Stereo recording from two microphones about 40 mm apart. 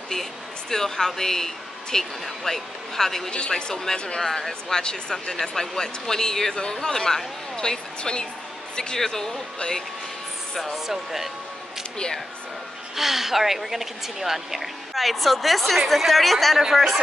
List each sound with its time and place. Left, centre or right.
0.1 s a woman's voice: centre
3.3 s a woman's voice: left
10.6 s speech: centre
12.9 s speech: centre